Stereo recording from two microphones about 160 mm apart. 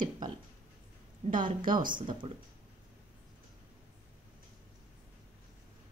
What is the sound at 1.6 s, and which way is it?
Speech, 60° right (ahead or behind).